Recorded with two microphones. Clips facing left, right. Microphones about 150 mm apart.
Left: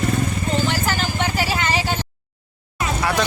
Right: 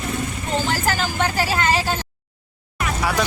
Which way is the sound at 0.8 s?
40° right (ahead or behind).